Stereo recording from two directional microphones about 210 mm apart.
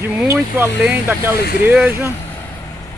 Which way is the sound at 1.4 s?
50° left (ahead or behind).